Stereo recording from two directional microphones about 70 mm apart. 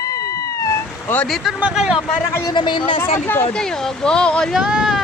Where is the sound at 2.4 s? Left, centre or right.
Left.